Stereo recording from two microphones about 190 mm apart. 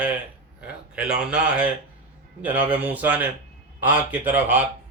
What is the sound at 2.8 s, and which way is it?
A man's voice, 10° right (ahead or behind).